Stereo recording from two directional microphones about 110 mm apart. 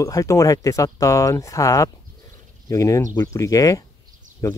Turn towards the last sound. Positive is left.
turn(degrees=30)  # may be behind; listen again after turning